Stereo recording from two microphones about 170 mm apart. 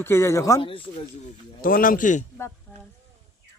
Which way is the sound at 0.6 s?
30° left (ahead or behind).